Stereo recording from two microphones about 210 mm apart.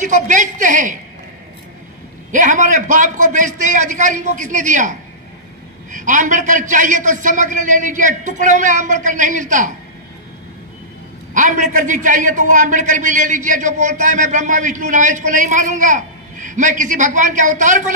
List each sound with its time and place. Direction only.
0.0 s a man's voice: 35° right (ahead or behind)
2.3 s a man's voice: 35° right (ahead or behind)
11.3 s a man's voice: 35° right (ahead or behind)